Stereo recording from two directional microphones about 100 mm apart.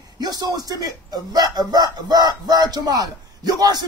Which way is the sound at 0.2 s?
40° right (ahead or behind).